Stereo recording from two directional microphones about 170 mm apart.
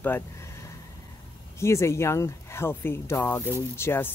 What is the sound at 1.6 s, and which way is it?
Speech, 15° left (ahead or behind).